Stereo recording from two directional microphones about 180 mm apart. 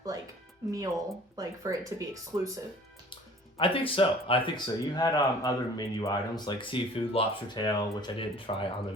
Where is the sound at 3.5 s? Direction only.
30° left (ahead or behind).